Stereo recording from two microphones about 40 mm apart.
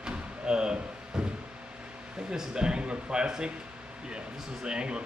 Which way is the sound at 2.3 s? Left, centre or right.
Centre.